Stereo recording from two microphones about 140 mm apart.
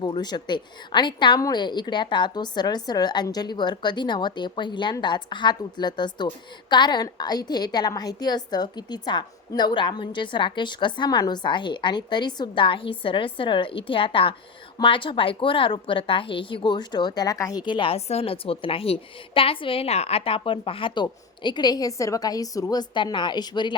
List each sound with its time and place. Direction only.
0.0 s a woman's voice: 30° left (ahead or behind)